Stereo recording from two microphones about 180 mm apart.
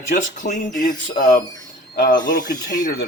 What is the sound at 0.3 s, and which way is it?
Speech, 45° left (ahead or behind).